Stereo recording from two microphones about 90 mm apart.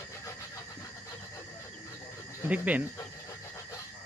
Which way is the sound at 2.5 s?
15° right (ahead or behind).